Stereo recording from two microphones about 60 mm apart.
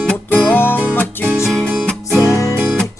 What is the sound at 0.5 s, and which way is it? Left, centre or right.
Music, left.